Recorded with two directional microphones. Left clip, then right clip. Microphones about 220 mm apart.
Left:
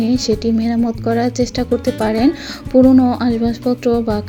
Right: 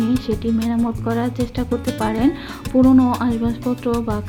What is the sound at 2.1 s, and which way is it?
Music, 20° left (ahead or behind).